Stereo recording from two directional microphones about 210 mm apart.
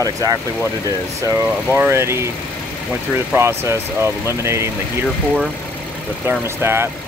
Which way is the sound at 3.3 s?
10° right (ahead or behind).